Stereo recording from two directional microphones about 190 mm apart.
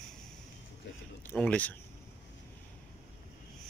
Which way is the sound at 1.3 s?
5° left (ahead or behind).